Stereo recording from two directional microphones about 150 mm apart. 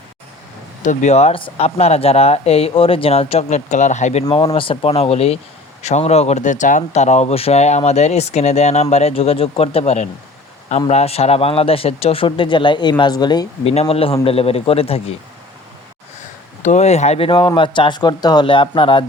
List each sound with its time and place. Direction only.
0.9 s speech: 45° left (ahead or behind)
4.3 s a man's voice: 35° left (ahead or behind)
13.7 s a man's voice: 40° left (ahead or behind)
16.6 s a man's voice: 50° left (ahead or behind)